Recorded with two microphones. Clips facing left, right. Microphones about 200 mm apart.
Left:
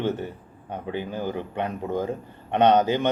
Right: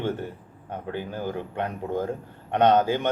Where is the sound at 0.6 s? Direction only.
15° left (ahead or behind).